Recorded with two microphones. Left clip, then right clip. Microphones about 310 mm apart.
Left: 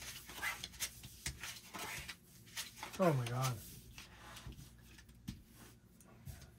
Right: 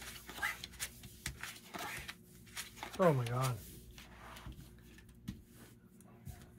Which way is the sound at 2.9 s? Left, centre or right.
Right.